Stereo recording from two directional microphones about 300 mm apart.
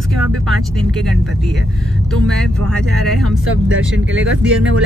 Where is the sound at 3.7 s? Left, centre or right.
Right.